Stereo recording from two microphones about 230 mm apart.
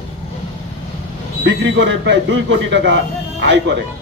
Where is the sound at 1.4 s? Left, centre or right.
Right.